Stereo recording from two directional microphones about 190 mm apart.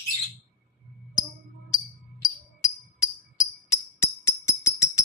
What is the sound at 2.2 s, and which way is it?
Music, 15° left (ahead or behind).